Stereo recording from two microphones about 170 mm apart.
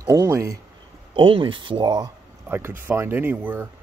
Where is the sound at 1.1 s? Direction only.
30° right (ahead or behind).